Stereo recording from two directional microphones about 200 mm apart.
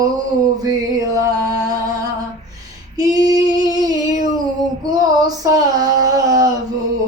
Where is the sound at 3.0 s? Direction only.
20° right (ahead or behind).